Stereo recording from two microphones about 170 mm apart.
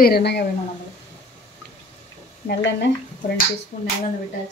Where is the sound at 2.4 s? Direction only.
90° left.